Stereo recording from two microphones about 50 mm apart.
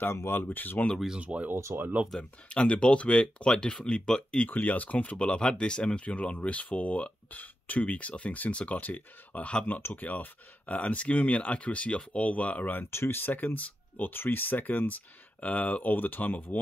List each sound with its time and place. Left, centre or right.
0.0 s speech: left
0.3 s speech: left
1.2 s speech: right
1.5 s speech: right
2.1 s speech: left
4.5 s speech: left
9.7 s speech: left
10.7 s speech: left
12.9 s speech: left